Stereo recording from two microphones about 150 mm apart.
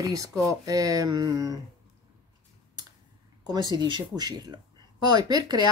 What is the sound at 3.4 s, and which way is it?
Speech, 30° right (ahead or behind).